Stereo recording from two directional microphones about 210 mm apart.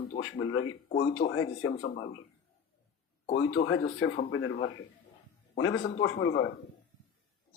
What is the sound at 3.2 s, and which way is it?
Speech, 25° left (ahead or behind).